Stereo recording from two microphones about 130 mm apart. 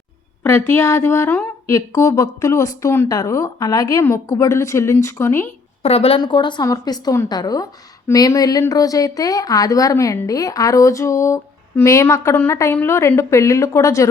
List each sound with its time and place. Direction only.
0.4 s a woman's voice: 20° left (ahead or behind)
5.8 s a woman's voice: 50° left (ahead or behind)
6.1 s a woman's voice: 35° left (ahead or behind)